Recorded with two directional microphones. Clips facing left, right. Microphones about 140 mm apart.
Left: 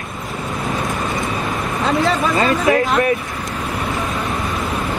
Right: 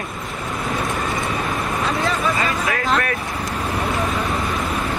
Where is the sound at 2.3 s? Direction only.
30° left (ahead or behind).